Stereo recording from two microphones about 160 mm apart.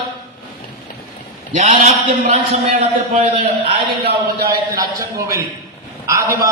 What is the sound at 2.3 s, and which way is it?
A man's voice, 45° right (ahead or behind).